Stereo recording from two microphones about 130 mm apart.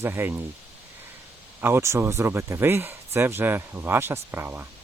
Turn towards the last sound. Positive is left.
turn(degrees=-15)  # may be behind; listen again after turning